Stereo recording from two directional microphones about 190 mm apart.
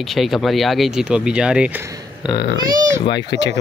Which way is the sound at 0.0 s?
Centre (ahead or behind).